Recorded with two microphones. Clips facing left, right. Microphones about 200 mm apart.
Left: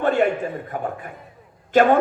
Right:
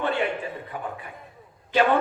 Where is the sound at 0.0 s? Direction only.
45° left (ahead or behind).